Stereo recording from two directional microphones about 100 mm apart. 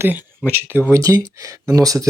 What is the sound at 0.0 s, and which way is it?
Speech, 20° right (ahead or behind).